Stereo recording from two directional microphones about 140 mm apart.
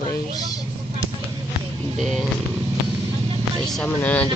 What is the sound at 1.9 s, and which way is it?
Speech, centre (ahead or behind).